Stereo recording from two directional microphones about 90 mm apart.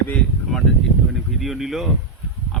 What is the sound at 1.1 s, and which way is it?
Speech, centre (ahead or behind).